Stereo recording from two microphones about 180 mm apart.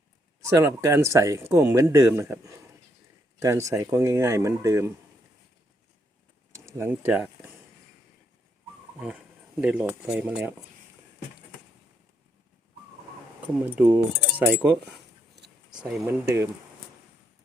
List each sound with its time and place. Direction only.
0.4 s speech: 15° right (ahead or behind)
6.7 s speech: 15° right (ahead or behind)
9.0 s speech: 10° right (ahead or behind)
13.7 s speech: 10° right (ahead or behind)
15.4 s a sound: 70° right (ahead or behind)
15.8 s speech: centre (ahead or behind)
16.0 s speech: 15° right (ahead or behind)